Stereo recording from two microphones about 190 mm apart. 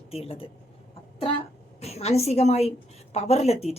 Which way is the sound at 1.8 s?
35° left (ahead or behind).